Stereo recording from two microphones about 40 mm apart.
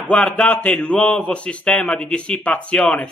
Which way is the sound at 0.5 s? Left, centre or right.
Left.